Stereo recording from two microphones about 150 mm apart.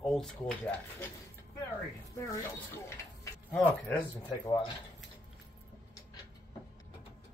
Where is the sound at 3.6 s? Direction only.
10° left (ahead or behind).